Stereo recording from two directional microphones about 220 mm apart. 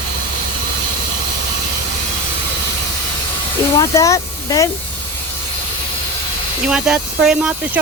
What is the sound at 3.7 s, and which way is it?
Speech, 15° left (ahead or behind).